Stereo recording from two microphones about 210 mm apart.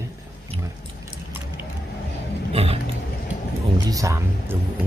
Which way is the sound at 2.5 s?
30° right (ahead or behind).